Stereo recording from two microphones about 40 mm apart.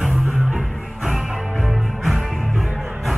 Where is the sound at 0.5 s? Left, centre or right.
Centre.